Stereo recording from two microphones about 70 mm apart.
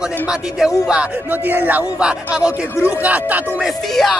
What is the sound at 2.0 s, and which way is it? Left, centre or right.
Speech, centre.